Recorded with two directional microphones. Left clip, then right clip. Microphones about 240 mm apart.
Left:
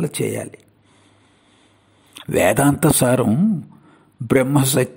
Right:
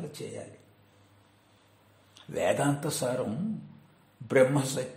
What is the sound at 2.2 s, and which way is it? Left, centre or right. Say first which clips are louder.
Speech: left 12 dB; left.